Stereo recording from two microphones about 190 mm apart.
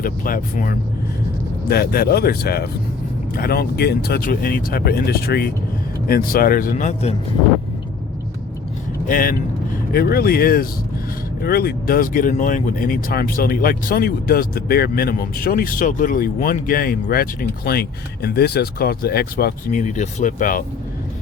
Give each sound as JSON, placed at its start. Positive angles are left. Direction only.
{"t": 0.0, "sound": "speech", "side_deg": 45}
{"t": 9.0, "sound": "speech", "side_deg": 45}